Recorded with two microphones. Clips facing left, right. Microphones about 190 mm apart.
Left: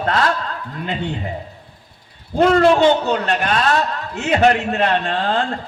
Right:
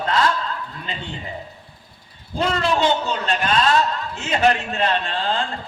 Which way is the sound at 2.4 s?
55° left (ahead or behind).